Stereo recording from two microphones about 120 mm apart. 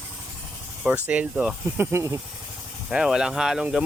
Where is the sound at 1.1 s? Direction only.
10° right (ahead or behind).